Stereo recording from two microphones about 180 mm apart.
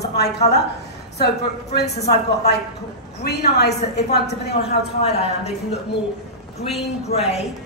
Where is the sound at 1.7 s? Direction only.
65° left (ahead or behind).